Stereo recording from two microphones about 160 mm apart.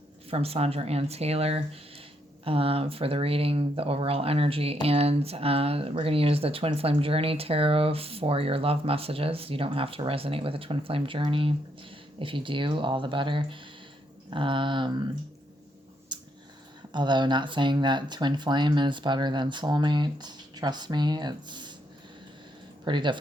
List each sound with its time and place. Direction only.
0.3 s speech: 40° right (ahead or behind)
16.1 s a sound: 30° right (ahead or behind)
16.9 s speech: 30° right (ahead or behind)
22.8 s speech: 30° right (ahead or behind)